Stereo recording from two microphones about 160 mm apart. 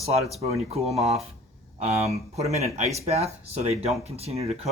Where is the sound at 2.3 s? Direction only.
40° right (ahead or behind).